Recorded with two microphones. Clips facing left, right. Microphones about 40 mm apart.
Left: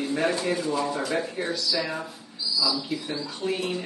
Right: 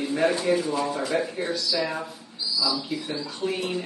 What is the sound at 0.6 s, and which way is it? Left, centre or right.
Speech, right.